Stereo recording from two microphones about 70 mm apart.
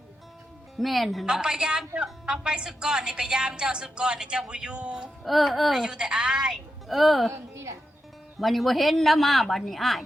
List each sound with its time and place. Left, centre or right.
0.8 s speech: centre
1.3 s a woman's voice: centre
5.2 s a woman's voice: centre
6.8 s speech: centre
7.3 s a woman's voice: right
8.4 s speech: centre